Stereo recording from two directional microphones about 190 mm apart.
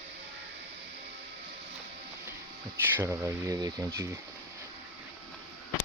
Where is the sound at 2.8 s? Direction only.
10° right (ahead or behind).